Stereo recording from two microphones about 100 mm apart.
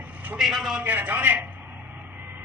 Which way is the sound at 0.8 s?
15° right (ahead or behind).